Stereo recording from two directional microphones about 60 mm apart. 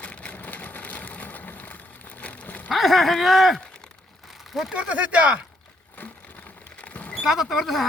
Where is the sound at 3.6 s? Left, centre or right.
Centre.